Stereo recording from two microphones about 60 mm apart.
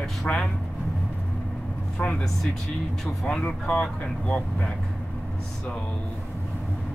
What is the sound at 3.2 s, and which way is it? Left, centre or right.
A man's voice, centre.